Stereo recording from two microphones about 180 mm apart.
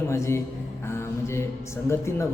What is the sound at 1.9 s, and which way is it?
Speech, 15° left (ahead or behind).